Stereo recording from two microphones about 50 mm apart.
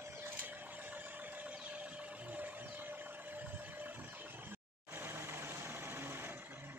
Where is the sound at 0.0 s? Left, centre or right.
Right.